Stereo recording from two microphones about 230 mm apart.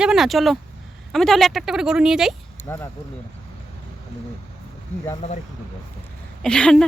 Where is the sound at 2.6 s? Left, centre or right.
Centre.